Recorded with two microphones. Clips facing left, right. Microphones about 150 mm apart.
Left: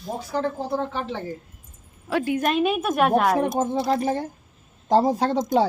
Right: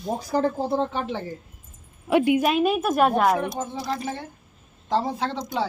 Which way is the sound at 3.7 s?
25° left (ahead or behind).